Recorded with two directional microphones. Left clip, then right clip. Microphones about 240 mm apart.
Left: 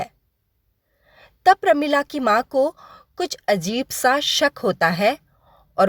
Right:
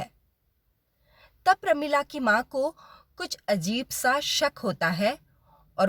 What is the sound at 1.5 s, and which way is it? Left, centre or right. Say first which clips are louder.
Speech: left 7 dB; left.